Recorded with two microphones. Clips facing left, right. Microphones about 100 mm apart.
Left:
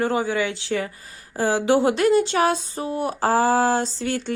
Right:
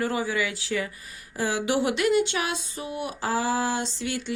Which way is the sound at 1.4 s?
35° left (ahead or behind).